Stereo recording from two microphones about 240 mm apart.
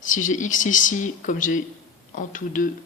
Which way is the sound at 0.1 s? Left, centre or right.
Left.